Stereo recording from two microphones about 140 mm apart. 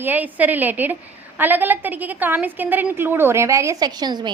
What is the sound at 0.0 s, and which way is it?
A woman's voice, 10° right (ahead or behind).